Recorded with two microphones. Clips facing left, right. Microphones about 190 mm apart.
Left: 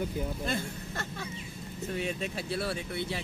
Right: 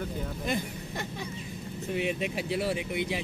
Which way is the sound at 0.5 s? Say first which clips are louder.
Right 2 dB; 15° right (ahead or behind).